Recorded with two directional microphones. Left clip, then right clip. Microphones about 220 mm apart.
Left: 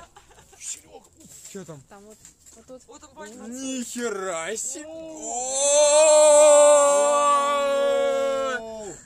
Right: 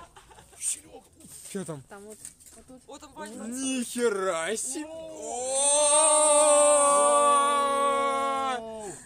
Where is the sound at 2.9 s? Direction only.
55° right (ahead or behind).